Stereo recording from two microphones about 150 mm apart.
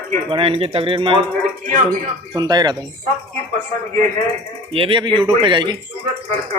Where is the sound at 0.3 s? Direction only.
35° right (ahead or behind).